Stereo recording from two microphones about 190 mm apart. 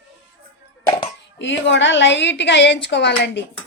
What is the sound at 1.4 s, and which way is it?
A woman's voice, 75° left (ahead or behind).